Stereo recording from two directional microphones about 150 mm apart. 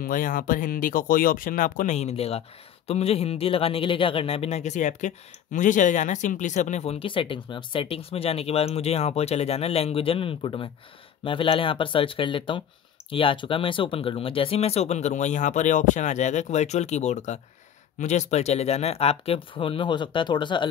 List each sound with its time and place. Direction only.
0.0 s speech: 65° left (ahead or behind); by 20.6 s 30° left (ahead or behind)